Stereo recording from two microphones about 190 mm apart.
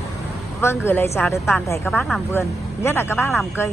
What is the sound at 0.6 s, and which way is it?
Speech, 10° left (ahead or behind).